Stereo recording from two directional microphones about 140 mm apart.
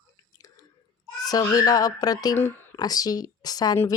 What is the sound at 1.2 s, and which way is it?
Speech, 25° left (ahead or behind).